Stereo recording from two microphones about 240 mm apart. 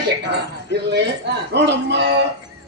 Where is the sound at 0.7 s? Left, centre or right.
Right.